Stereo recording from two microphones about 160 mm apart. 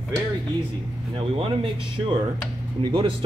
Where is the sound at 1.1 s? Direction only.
35° right (ahead or behind).